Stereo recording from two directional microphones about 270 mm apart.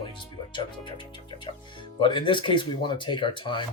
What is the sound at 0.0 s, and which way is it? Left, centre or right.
Speech, centre.